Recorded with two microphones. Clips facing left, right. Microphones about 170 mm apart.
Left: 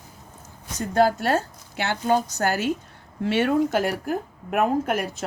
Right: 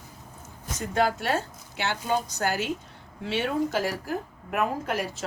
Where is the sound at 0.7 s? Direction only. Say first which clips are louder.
Left 5 dB; 40° left (ahead or behind).